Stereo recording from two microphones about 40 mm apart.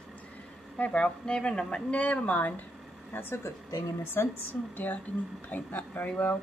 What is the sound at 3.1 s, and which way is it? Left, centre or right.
Speech, left.